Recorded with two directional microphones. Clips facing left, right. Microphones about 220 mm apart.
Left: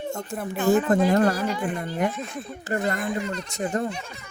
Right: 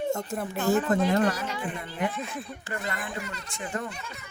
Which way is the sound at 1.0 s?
40° left (ahead or behind).